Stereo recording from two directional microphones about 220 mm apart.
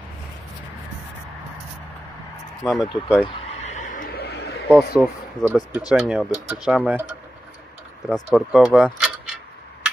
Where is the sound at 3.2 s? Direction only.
30° left (ahead or behind); by 4.4 s 50° left (ahead or behind).